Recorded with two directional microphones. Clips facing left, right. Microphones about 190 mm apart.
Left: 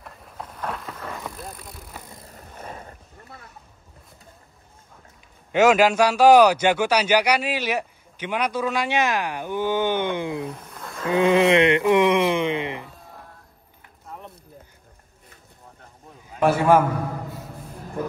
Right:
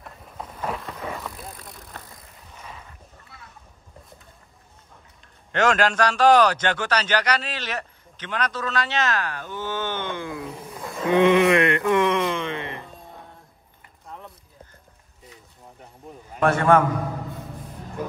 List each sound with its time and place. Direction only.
0.0 s vehicle: centre (ahead or behind)
2.3 s a sound: 50° left (ahead or behind)
5.5 s a man's voice: 5° left (ahead or behind)
10.6 s roaring cats: centre (ahead or behind)
11.3 s music: 25° left (ahead or behind)
16.3 s a man's voice: 5° left (ahead or behind)